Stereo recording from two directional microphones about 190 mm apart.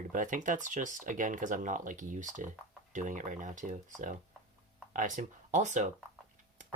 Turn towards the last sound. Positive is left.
turn(degrees=-40)  # may be behind; listen again after turning